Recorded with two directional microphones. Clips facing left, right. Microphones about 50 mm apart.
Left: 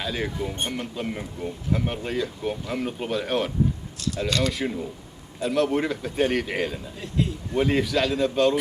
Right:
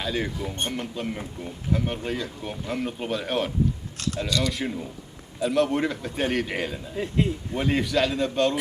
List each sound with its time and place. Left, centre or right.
0.0 s speech: centre
4.3 s speech: left
4.5 s speech: centre
6.9 s a man's voice: right
7.5 s speech: centre